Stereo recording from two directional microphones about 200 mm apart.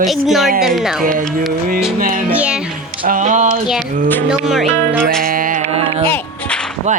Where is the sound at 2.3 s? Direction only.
5° right (ahead or behind).